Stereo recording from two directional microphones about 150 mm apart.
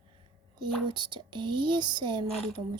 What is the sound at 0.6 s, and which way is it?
Speech, 30° right (ahead or behind).